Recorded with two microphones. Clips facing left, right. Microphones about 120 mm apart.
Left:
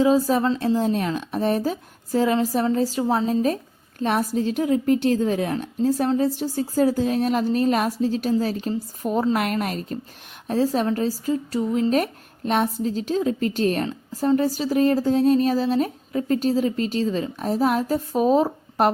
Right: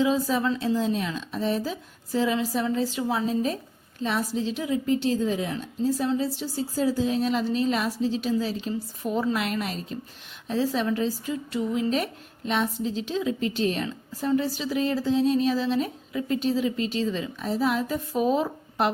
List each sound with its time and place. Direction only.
0.0 s speech: 40° left (ahead or behind)
0.8 s a woman's voice: 50° left (ahead or behind)